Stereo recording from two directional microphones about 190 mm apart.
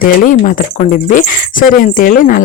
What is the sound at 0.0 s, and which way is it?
A woman's voice, 45° left (ahead or behind).